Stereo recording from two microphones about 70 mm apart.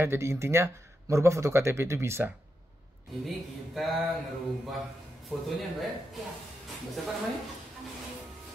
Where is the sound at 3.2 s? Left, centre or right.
Centre.